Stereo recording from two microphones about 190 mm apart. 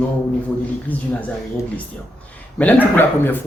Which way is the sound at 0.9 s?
10° left (ahead or behind).